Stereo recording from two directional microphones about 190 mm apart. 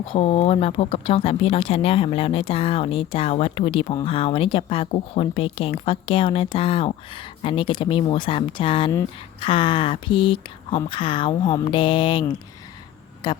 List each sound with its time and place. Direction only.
0.0 s speech: 30° left (ahead or behind)
13.2 s speech: 20° left (ahead or behind)